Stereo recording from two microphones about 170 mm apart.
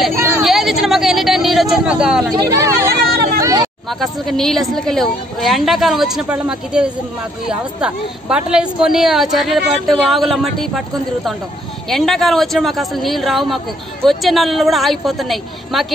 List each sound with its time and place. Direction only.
0.1 s vehicle: 15° right (ahead or behind)
0.4 s vehicle: centre (ahead or behind)
2.4 s speech: 20° right (ahead or behind)
3.3 s a sound: 20° right (ahead or behind)
4.0 s a woman's voice: centre (ahead or behind)
11.9 s a woman's voice: centre (ahead or behind)